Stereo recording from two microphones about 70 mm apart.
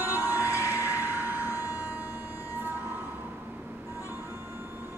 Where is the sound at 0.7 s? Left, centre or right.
Right.